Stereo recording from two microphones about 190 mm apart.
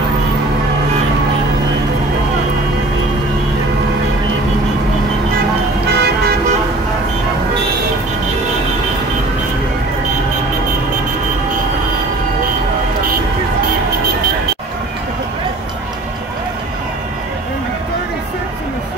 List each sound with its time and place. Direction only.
5.9 s vehicle: 60° right (ahead or behind)